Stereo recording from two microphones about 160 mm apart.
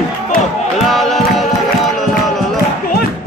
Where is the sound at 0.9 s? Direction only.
Centre (ahead or behind).